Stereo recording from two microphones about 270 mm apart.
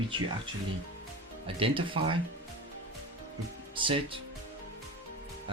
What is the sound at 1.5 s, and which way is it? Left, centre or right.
Speech, centre.